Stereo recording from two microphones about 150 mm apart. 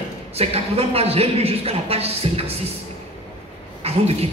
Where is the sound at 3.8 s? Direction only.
40° right (ahead or behind).